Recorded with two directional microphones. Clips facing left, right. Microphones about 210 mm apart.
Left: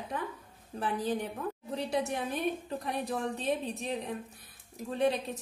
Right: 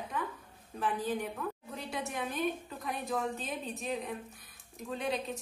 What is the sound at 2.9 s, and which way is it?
A woman's voice, 30° left (ahead or behind).